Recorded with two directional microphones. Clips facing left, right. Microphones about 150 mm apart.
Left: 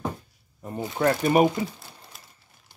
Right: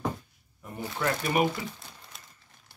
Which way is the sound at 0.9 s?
40° left (ahead or behind).